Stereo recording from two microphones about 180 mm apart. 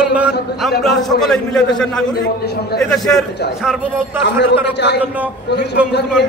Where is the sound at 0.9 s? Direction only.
Centre (ahead or behind).